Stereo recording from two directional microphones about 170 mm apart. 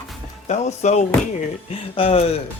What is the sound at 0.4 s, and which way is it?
Speech, 40° left (ahead or behind).